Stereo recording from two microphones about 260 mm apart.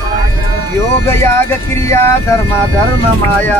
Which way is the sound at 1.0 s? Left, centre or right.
Centre.